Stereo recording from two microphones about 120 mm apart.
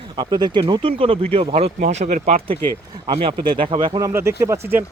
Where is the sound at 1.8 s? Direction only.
75° right (ahead or behind).